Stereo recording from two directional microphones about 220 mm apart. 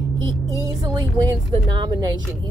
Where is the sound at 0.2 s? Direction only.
20° right (ahead or behind).